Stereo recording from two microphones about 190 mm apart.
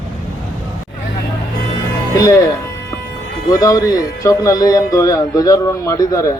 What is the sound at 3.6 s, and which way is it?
Speech, 20° left (ahead or behind).